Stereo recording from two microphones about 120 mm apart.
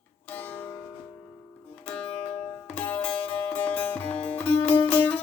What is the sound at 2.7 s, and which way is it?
Music, 15° left (ahead or behind).